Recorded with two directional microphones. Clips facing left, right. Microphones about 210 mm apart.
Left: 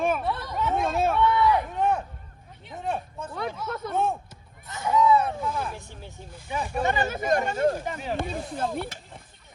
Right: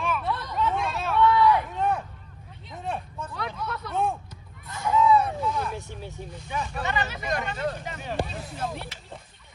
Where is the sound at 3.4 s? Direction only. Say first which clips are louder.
Left 3 dB; 25° left (ahead or behind).